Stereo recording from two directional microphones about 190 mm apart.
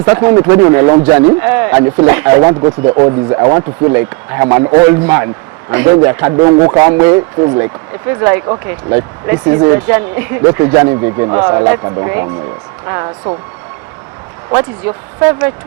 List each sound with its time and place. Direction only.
0.0 s speech: 15° right (ahead or behind)
11.8 s speech: 25° right (ahead or behind)
12.0 s speech: 15° right (ahead or behind)
14.8 s speech: 10° right (ahead or behind)